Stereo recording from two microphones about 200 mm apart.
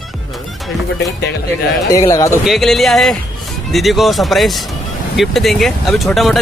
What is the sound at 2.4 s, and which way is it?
Speech, centre (ahead or behind).